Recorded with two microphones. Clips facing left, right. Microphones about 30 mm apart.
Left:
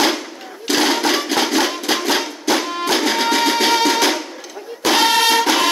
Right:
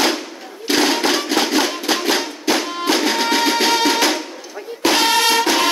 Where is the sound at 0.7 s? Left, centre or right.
Right.